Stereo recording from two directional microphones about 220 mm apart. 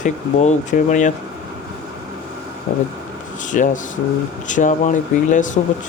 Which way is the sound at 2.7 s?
35° left (ahead or behind).